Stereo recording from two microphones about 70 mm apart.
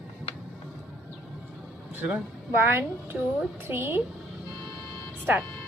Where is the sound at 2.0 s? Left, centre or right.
Right.